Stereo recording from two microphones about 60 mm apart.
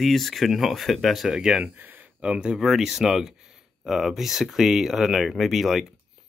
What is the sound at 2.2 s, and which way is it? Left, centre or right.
Speech, centre.